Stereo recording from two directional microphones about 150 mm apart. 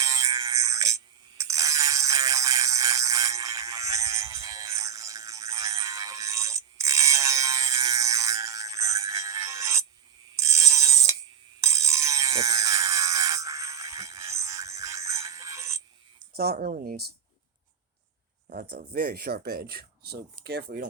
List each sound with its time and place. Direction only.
0.0 s music: 20° right (ahead or behind)
10.3 s a sound: 20° right (ahead or behind)
16.3 s speech: 90° right
18.4 s speech: 80° right